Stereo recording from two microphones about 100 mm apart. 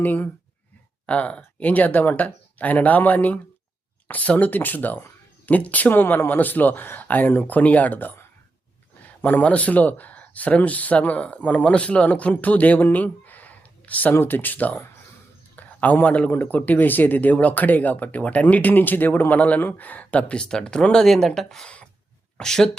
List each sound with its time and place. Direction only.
0.0 s speech: 20° left (ahead or behind)